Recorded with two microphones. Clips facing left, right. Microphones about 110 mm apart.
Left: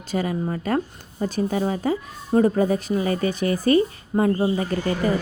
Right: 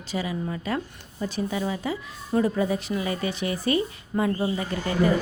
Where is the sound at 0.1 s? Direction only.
45° left (ahead or behind).